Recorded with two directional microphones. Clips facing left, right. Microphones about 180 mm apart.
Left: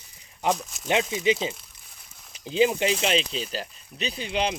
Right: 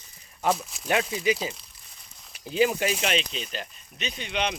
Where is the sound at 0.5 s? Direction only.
Centre (ahead or behind).